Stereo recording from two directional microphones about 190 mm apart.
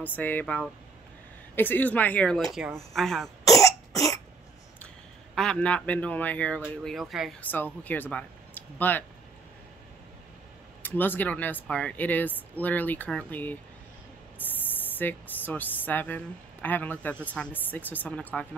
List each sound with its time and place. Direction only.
0.1 s speech: 10° left (ahead or behind)
3.6 s cough: 20° left (ahead or behind)
5.3 s speech: 5° left (ahead or behind)
10.8 s speech: 10° left (ahead or behind)